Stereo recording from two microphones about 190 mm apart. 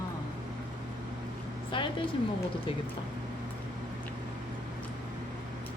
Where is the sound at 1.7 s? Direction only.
25° left (ahead or behind).